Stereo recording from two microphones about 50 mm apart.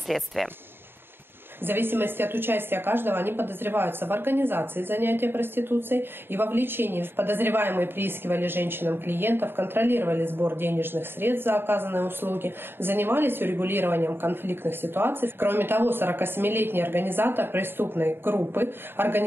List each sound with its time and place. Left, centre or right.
0.1 s speech: centre
1.6 s a woman's voice: right